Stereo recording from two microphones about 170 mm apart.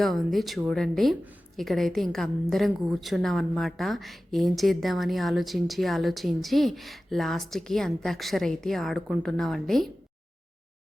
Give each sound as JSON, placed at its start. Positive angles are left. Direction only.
{"t": 0.0, "sound": "speech", "side_deg": 0}